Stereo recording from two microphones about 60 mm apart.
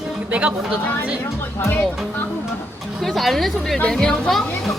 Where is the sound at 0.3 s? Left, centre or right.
Right.